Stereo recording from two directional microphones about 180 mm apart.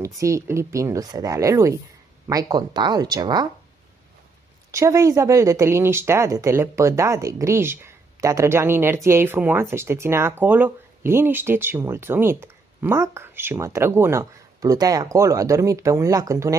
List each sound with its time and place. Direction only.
0.0 s speech: 15° right (ahead or behind)
4.6 s speech: 15° right (ahead or behind)